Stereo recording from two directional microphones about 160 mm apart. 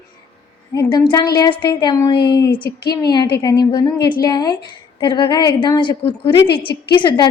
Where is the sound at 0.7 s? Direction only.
25° left (ahead or behind).